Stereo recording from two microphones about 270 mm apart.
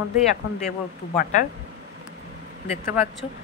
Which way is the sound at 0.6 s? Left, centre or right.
Left.